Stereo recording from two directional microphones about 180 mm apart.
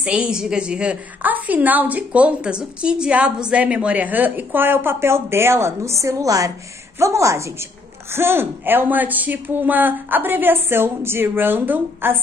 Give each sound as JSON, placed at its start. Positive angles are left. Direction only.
{"t": 0.0, "sound": "a woman's voice", "side_deg": -5}